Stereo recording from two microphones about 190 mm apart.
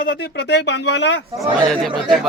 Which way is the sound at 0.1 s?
60° left (ahead or behind).